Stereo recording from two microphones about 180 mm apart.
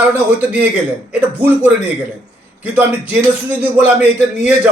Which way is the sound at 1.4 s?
10° right (ahead or behind).